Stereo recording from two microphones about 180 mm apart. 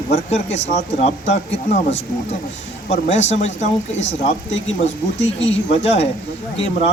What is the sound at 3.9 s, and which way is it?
Speech, 80° left.